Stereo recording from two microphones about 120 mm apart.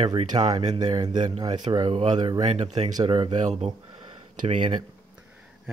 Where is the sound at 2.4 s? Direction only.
70° right (ahead or behind).